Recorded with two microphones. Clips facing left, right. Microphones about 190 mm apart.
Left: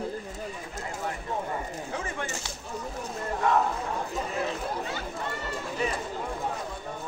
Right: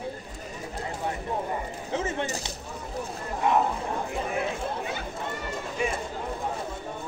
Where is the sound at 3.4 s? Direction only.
20° right (ahead or behind).